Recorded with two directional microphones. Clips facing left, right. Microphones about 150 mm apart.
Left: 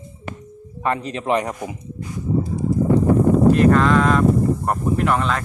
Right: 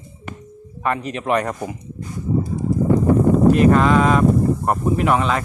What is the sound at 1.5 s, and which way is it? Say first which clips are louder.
Speech: right 2 dB; 10° left (ahead or behind).